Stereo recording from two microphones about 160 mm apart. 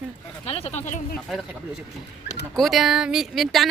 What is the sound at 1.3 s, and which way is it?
Speech, centre (ahead or behind).